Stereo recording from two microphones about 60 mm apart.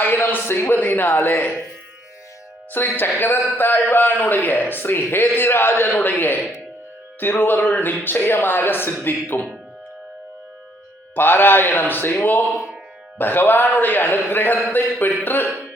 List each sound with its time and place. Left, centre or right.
0.0 s a man's voice: left
2.7 s a man's voice: left
11.1 s a man's voice: left
12.5 s music: centre
13.1 s a man's voice: left